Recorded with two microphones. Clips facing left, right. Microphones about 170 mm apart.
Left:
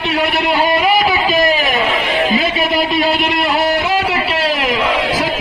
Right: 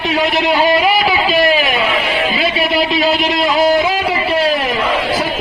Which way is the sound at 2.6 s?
50° left (ahead or behind).